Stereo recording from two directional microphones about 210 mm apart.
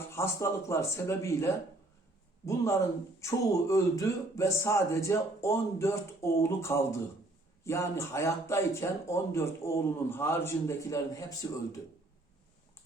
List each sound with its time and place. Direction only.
0.1 s speech: 15° left (ahead or behind)
3.2 s speech: 15° left (ahead or behind)